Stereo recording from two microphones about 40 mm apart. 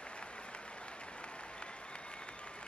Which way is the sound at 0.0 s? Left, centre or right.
Left.